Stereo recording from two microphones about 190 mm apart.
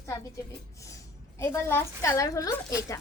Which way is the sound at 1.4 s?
10° left (ahead or behind).